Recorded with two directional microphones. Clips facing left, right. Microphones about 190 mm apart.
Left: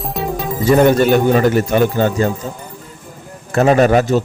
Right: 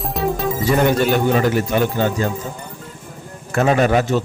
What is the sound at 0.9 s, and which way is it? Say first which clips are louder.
Speech: left 4 dB; 50° left (ahead or behind).